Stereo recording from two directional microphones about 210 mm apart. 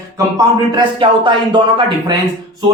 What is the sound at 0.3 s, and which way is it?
Speech, 25° right (ahead or behind).